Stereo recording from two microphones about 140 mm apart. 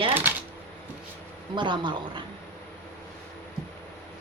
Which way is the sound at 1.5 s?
35° right (ahead or behind).